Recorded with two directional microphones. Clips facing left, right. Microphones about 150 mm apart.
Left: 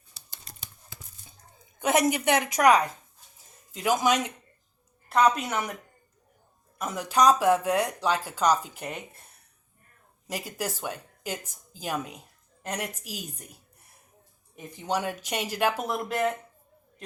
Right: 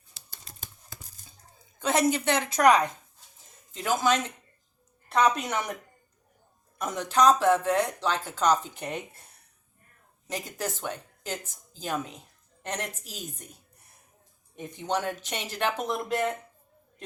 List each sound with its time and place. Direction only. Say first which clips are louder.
0.6 s tearing: right 5 dB; 40° right (ahead or behind)
1.8 s speech: left 1 dB; 15° left (ahead or behind)
5.0 s a sound: left 2 dB; 5° left (ahead or behind)
5.4 s speech: even; 5° left (ahead or behind)
6.7 s speech: even; 5° left (ahead or behind)
10.2 s speech: even; 10° left (ahead or behind)